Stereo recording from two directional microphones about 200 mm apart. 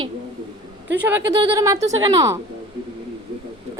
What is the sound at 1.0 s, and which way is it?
Speech, 15° right (ahead or behind).